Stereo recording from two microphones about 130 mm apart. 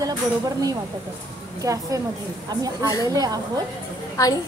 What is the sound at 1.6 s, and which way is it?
A woman's voice, 25° right (ahead or behind).